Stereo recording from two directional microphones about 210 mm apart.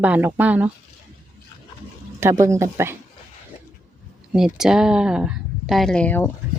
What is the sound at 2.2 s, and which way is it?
Speech, 15° right (ahead or behind).